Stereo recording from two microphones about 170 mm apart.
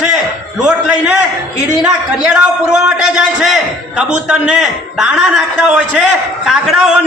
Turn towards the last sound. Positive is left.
turn(degrees=-5)  # may be behind; listen again after turning